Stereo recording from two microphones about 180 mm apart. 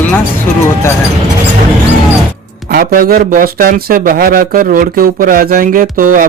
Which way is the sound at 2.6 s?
55° right (ahead or behind).